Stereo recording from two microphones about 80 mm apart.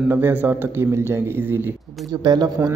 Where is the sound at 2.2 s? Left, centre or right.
Right.